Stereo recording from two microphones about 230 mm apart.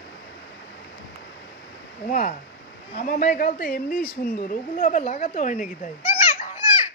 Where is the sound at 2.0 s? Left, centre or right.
Left.